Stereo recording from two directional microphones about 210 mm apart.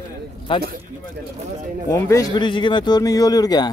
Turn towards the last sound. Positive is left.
turn(degrees=20)  # may be behind; listen again after turning